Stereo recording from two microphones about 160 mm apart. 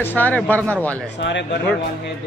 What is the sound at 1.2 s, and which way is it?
Speech, 90° left.